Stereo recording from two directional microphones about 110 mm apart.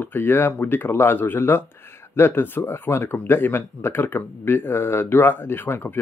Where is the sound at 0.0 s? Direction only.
20° left (ahead or behind).